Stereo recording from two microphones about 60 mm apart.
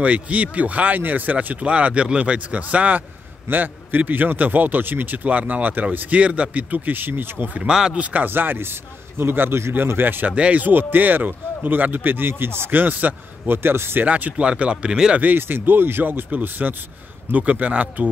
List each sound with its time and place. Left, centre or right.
0.0 s speech: right
7.7 s speech: centre
8.0 s speech: right
8.3 s speech: right
10.3 s speech: right
14.0 s speech: right
15.1 s speech: right